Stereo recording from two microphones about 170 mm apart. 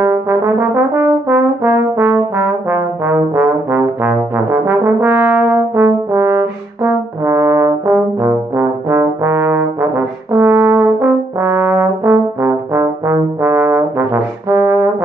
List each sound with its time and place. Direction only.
0.0 s brass instrument: 15° right (ahead or behind)
8.2 s trombone: 15° right (ahead or behind)